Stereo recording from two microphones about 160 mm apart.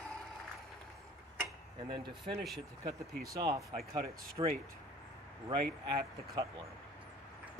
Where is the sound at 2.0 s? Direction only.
30° right (ahead or behind).